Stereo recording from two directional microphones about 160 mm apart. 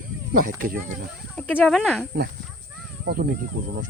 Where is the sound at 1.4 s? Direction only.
5° left (ahead or behind).